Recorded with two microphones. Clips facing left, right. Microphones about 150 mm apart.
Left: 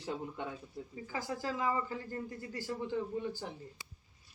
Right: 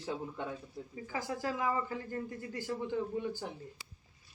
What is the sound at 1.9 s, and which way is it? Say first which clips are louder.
Speech: right 2 dB; 20° right (ahead or behind).